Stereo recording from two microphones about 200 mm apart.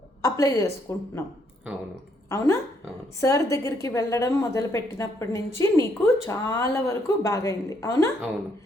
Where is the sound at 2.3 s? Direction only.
15° left (ahead or behind).